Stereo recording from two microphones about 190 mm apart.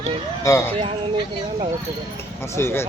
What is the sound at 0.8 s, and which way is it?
Speech, 30° right (ahead or behind).